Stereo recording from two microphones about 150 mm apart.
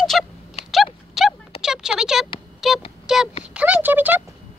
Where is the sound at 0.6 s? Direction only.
45° left (ahead or behind).